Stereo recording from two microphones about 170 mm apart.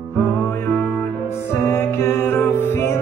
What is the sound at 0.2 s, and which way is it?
Music, 15° left (ahead or behind).